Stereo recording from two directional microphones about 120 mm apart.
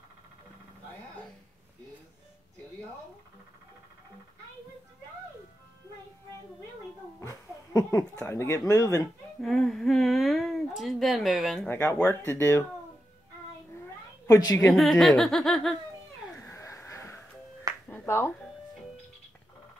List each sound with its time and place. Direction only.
7.2 s speech: 25° left (ahead or behind)
9.0 s speech: centre (ahead or behind)
11.8 s speech: 25° left (ahead or behind)
14.2 s a woman's voice: 30° left (ahead or behind)
14.7 s speech: centre (ahead or behind)
16.3 s a sound: 25° left (ahead or behind)
17.8 s finger snapping: 20° left (ahead or behind)